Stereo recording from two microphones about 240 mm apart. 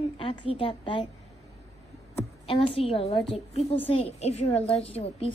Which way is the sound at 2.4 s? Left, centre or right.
Left.